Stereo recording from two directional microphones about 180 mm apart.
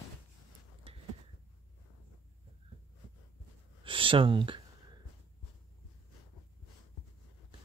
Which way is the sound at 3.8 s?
30° right (ahead or behind).